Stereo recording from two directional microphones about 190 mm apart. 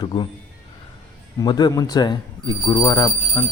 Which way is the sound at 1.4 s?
20° left (ahead or behind).